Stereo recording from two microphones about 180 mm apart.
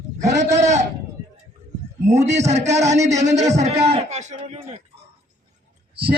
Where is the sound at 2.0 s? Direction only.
40° right (ahead or behind).